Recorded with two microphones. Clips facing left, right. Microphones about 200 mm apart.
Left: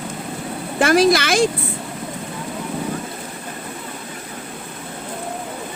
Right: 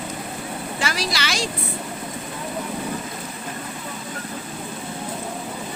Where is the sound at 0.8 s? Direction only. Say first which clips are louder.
Left 14 dB; 55° left (ahead or behind).